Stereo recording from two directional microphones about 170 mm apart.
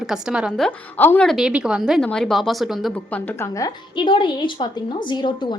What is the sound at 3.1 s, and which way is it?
A woman's voice, 15° left (ahead or behind).